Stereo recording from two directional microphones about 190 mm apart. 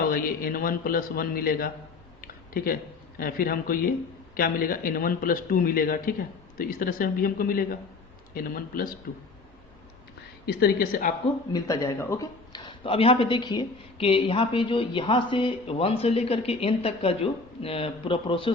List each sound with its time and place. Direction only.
0.1 s speech: 50° left (ahead or behind)
2.2 s a sound: 50° left (ahead or behind)
3.2 s speech: 50° left (ahead or behind)
10.4 s speech: 55° left (ahead or behind)
11.5 s speech: 15° left (ahead or behind)